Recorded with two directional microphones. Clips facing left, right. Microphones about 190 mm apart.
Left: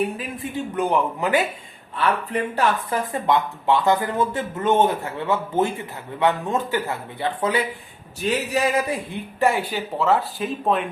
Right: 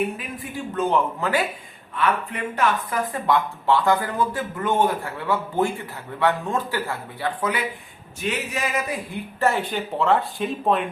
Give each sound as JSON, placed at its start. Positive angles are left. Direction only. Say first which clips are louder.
{"t": 0.4, "sound": "speech", "louder": "left 5 dB", "side_deg": 25}
{"t": 0.8, "sound": "a man's voice", "louder": "even", "side_deg": 15}
{"t": 2.0, "sound": "speech", "louder": "left 2 dB", "side_deg": 35}
{"t": 9.4, "sound": "speech", "louder": "left 1 dB", "side_deg": 10}